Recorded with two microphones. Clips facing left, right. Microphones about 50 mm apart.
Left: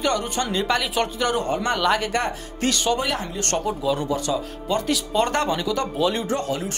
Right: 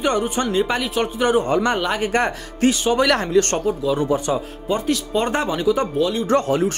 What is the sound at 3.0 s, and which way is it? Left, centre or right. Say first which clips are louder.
Speech: right 8 dB; right.